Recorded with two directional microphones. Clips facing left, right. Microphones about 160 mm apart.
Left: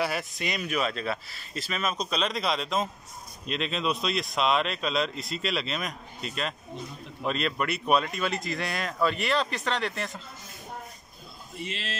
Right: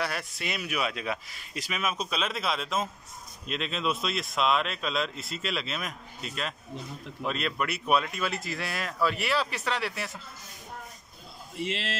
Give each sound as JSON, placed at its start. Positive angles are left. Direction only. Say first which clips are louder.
{"t": 0.0, "sound": "speech", "louder": "left 3 dB", "side_deg": 0}
{"t": 11.6, "sound": "speech", "louder": "right 4 dB", "side_deg": -90}